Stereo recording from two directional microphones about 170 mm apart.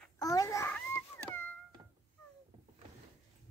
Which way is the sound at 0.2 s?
20° left (ahead or behind).